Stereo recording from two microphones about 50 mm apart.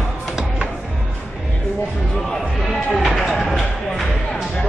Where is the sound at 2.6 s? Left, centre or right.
Centre.